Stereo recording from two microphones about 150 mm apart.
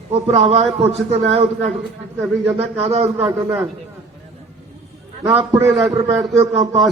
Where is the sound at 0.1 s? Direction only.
40° right (ahead or behind).